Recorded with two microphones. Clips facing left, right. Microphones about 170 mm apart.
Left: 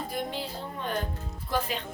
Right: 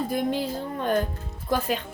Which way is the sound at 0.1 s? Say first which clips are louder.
Right 8 dB; 45° right (ahead or behind).